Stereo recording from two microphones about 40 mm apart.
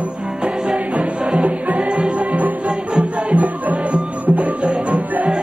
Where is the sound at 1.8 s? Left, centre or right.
Right.